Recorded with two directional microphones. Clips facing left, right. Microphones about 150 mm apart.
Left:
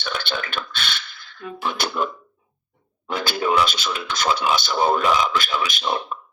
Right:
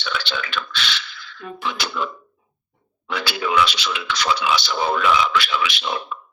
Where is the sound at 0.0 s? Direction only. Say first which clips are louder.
Even; 50° left (ahead or behind).